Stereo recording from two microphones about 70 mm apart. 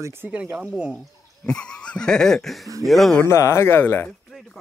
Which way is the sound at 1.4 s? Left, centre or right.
Centre.